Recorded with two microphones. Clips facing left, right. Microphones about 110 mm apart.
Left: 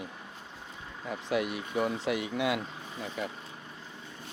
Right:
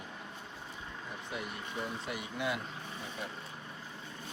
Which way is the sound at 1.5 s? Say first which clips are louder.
Left 8 dB; 90° left.